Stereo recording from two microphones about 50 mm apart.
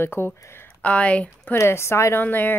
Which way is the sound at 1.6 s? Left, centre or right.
Left.